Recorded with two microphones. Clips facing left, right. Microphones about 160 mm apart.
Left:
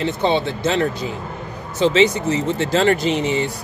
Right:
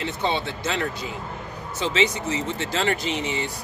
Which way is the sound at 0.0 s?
25° left (ahead or behind).